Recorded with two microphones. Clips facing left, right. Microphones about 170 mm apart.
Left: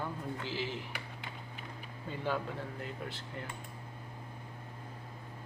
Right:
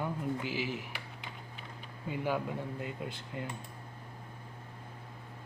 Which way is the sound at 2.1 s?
10° right (ahead or behind).